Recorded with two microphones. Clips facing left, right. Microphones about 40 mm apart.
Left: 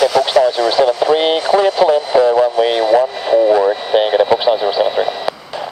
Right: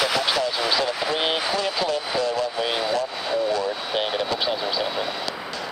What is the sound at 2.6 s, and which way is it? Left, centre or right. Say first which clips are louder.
Vehicle: left 12 dB; left.